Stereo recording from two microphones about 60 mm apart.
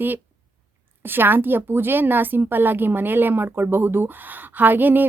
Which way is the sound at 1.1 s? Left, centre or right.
Right.